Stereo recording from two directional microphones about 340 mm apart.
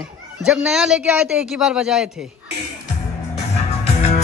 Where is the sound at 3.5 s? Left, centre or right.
Centre.